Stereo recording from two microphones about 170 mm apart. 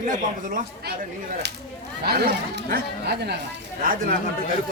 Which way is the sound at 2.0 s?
70° right (ahead or behind).